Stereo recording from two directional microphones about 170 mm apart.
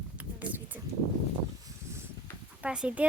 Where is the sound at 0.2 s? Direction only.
10° right (ahead or behind).